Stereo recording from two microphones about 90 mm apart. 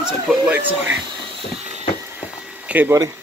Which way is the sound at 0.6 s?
20° right (ahead or behind).